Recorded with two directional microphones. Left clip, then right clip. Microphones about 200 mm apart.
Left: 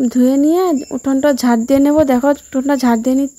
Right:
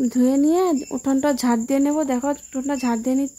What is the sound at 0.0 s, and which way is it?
Speech, 20° left (ahead or behind).